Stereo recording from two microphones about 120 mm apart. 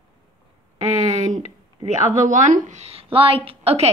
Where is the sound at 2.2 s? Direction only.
90° right; by 3.9 s 60° right (ahead or behind).